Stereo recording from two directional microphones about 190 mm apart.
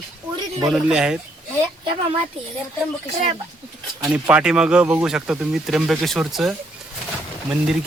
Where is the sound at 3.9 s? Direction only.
10° right (ahead or behind).